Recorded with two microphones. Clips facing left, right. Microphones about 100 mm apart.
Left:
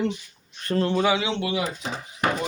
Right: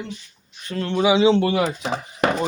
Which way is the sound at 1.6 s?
90° right.